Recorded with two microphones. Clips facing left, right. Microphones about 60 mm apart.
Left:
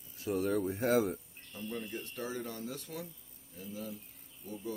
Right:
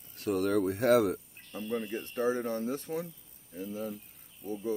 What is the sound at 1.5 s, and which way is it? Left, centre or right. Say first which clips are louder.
Speech: right 6 dB; right.